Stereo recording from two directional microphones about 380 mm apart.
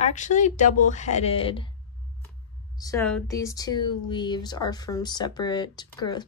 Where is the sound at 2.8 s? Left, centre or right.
Centre.